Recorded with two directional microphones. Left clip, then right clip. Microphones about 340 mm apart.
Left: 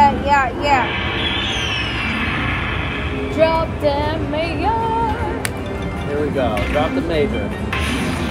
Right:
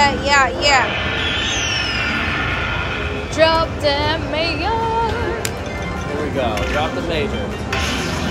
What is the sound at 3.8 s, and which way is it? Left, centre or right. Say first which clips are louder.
Speech: right 1 dB; centre.